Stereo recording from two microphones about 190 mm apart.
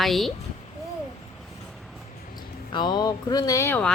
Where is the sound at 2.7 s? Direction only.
20° left (ahead or behind).